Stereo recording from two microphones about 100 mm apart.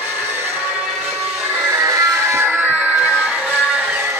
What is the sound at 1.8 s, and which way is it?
Music, 35° right (ahead or behind).